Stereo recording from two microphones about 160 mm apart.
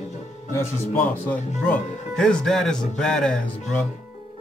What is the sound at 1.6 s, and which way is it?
Speech, 10° left (ahead or behind).